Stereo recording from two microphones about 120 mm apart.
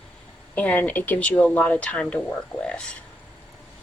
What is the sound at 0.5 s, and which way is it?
Speech, 15° left (ahead or behind).